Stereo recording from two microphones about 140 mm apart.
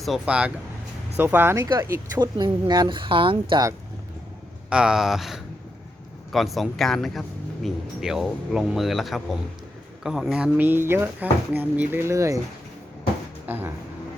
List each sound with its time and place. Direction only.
0.0 s speech: 5° right (ahead or behind)
2.1 s speech: 30° right (ahead or behind)
3.5 s speech: 25° right (ahead or behind)
4.7 s speech: 5° right (ahead or behind); by 12.4 s 20° right (ahead or behind)
13.5 s speech: 15° right (ahead or behind)